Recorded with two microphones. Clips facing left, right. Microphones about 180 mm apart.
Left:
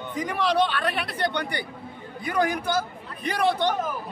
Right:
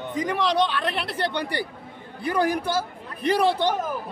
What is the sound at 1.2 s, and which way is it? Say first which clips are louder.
Speech: right 1 dB; 30° right (ahead or behind).